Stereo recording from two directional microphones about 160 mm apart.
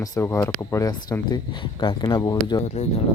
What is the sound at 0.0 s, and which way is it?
Speech, 20° left (ahead or behind).